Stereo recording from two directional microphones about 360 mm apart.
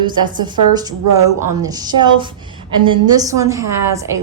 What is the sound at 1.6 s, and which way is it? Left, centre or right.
A woman's voice, centre.